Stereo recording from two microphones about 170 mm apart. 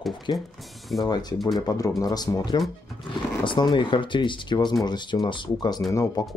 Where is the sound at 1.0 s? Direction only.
25° left (ahead or behind).